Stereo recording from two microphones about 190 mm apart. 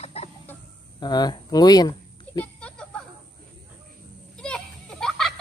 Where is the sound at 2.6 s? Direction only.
5° left (ahead or behind).